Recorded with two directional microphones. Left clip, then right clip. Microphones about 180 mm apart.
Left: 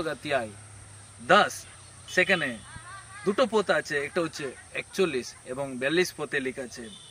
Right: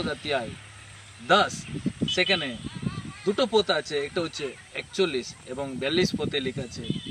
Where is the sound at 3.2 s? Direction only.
15° left (ahead or behind).